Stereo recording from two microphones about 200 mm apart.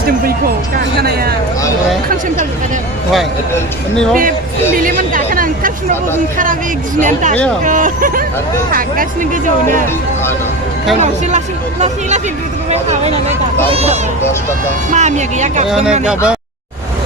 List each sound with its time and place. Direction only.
3.5 s speech: 5° left (ahead or behind)
4.8 s speech: 45° right (ahead or behind)
7.6 s speech: 40° right (ahead or behind)
10.9 s speech: 35° right (ahead or behind)
15.7 s speech: 5° right (ahead or behind)